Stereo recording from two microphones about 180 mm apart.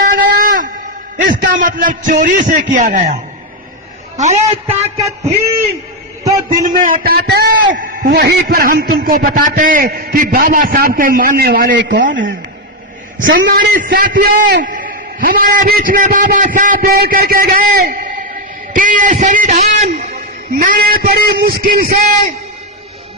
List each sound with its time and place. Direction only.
0.0 s a sound: 50° right (ahead or behind)
1.1 s a man's voice: 50° right (ahead or behind)
4.2 s a man's voice: 40° right (ahead or behind)
6.5 s a man's voice: 50° right (ahead or behind); by 11.9 s 65° right (ahead or behind)
13.3 s a man's voice: 55° right (ahead or behind); by 20.1 s 40° right (ahead or behind)
20.6 s speech: 50° right (ahead or behind)